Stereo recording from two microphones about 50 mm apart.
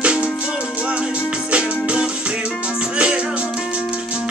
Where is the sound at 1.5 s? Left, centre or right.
Right.